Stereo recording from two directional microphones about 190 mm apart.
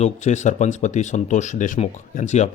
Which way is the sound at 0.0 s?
40° left (ahead or behind).